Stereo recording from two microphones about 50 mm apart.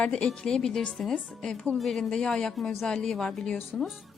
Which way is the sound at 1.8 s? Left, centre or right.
Centre.